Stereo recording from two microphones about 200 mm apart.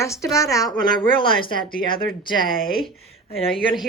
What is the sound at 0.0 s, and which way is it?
Speech, 15° left (ahead or behind).